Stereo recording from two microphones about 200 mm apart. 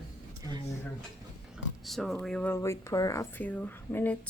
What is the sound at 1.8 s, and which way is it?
Speech, centre (ahead or behind).